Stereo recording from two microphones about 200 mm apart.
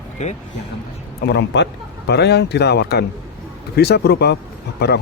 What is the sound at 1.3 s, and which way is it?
A man's voice, 60° left (ahead or behind).